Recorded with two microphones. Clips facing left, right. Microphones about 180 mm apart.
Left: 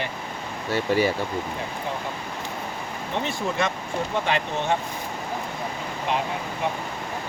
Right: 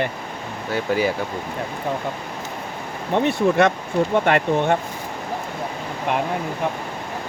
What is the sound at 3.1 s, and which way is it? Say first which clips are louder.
Speech: right 10 dB; 60° right (ahead or behind).